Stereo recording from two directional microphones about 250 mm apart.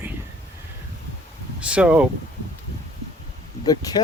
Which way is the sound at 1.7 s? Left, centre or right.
Centre.